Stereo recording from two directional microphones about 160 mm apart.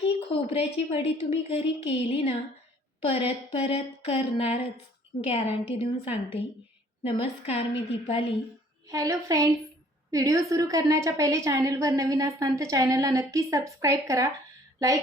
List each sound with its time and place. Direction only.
0.0 s a woman's voice: 35° left (ahead or behind)
8.9 s a woman's voice: 20° right (ahead or behind)